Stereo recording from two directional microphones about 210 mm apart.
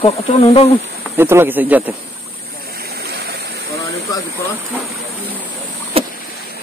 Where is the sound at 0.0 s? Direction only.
30° left (ahead or behind).